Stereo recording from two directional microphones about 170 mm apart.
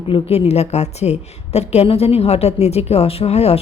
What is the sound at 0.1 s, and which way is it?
A woman's voice, 35° left (ahead or behind).